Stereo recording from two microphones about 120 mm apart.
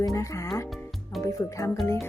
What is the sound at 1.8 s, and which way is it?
Speech, 25° left (ahead or behind).